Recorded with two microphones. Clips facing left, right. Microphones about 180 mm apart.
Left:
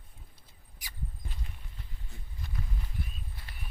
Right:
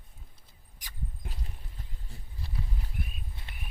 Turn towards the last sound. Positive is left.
turn(degrees=-25)  # may be behind; listen again after turning